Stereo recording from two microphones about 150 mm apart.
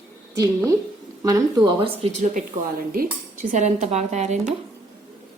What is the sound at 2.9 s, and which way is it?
Speech, 60° right (ahead or behind).